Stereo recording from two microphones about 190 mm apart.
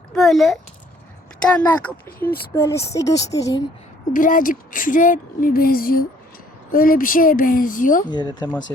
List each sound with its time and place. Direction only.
0.1 s a child's voice: centre (ahead or behind); by 3.6 s 20° left (ahead or behind)
4.1 s speech: 45° left (ahead or behind)
8.1 s speech: 20° left (ahead or behind)